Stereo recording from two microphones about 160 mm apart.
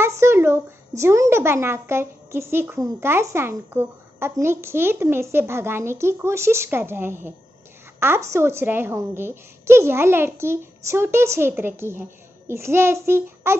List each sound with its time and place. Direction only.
0.0 s speech: 15° right (ahead or behind)